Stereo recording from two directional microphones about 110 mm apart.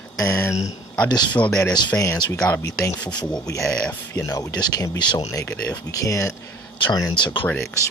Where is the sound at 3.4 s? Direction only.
30° left (ahead or behind).